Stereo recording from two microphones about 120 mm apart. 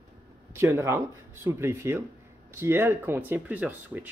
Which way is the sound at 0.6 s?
20° right (ahead or behind).